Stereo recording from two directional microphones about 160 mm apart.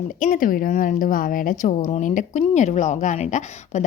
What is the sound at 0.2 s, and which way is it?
A woman's voice, 55° left (ahead or behind).